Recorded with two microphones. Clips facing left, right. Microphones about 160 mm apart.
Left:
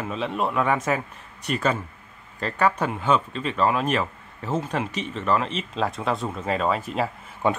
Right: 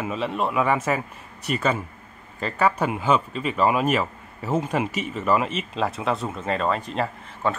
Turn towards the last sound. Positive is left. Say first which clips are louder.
# left 2 dB
turn(degrees=15)  # may be behind; listen again after turning